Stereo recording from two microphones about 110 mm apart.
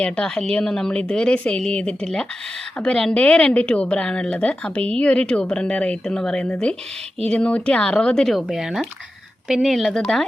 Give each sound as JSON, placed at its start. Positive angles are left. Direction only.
{"t": 0.0, "sound": "a woman's voice", "side_deg": 10}